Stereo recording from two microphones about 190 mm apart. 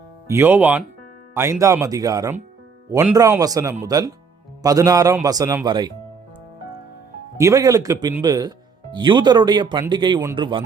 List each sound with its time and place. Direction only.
0.3 s speech: 10° right (ahead or behind)
7.3 s speech: 15° right (ahead or behind)